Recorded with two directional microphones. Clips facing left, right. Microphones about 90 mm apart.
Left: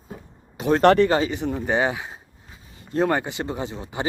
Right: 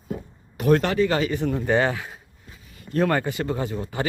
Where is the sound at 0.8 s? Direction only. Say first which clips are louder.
Left 7 dB; 60° left (ahead or behind).